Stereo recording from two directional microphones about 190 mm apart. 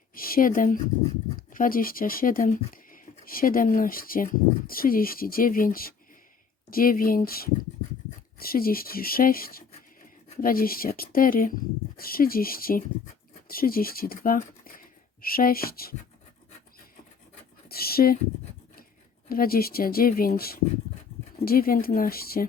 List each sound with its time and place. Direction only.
0.1 s speech: 50° left (ahead or behind)
17.7 s speech: 55° left (ahead or behind)
19.3 s speech: 50° left (ahead or behind)